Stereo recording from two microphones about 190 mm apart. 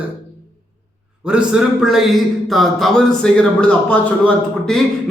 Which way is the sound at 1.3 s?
5° right (ahead or behind).